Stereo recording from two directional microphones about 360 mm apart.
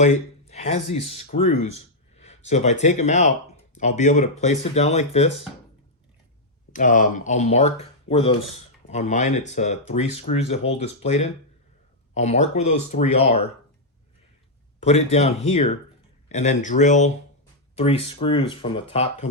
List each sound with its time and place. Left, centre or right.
0.0 s speech: centre
6.7 s speech: left
14.8 s speech: centre